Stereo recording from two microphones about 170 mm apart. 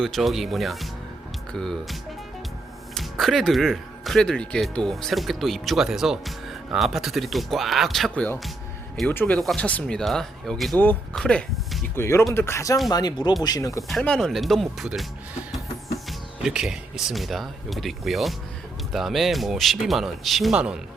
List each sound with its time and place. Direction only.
0.0 s speech: centre (ahead or behind)
11.9 s speech: 15° left (ahead or behind)
13.8 s speech: 5° left (ahead or behind)
16.0 s speech: 5° right (ahead or behind)